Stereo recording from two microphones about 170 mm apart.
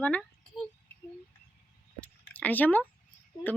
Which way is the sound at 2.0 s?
10° left (ahead or behind).